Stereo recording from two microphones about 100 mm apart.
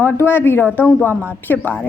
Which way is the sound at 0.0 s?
20° left (ahead or behind).